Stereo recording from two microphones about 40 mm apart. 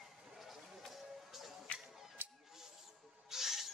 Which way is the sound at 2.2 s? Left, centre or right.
Right.